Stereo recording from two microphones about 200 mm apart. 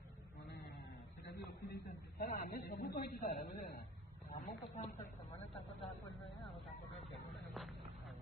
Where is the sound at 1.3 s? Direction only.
50° left (ahead or behind).